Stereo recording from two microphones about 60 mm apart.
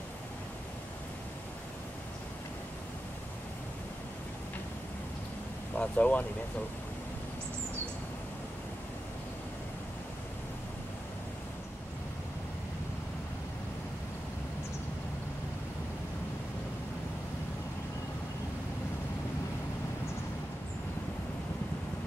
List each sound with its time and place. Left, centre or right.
5.8 s speech: left